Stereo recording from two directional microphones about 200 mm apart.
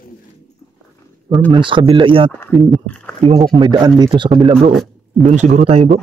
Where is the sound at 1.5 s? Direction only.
25° right (ahead or behind).